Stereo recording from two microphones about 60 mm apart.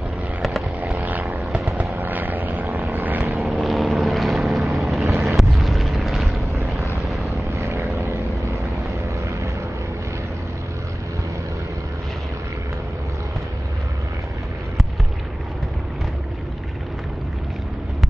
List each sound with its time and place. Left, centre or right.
0.4 s vehicle: centre
0.9 s vehicle: right
1.4 s wild animals: centre
2.0 s vehicle: right
2.6 s vehicle: right
2.9 s vehicle: right
3.6 s vehicle: centre
5.0 s a sound: right
5.3 s vehicle: centre
7.5 s vehicle: right